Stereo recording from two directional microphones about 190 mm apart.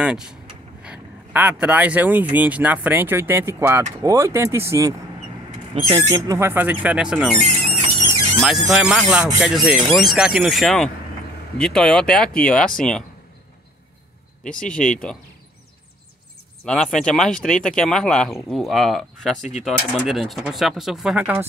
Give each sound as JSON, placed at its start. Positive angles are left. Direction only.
{"t": 0.0, "sound": "speech", "side_deg": -5}
{"t": 6.0, "sound": "speech", "side_deg": -15}
{"t": 14.4, "sound": "speech", "side_deg": 45}
{"t": 14.9, "sound": "speech", "side_deg": 5}
{"t": 16.6, "sound": "speech", "side_deg": 5}